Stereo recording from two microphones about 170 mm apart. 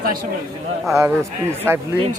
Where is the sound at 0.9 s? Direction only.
15° right (ahead or behind).